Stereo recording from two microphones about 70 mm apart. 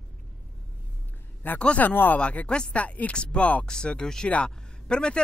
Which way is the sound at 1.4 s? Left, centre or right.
Centre.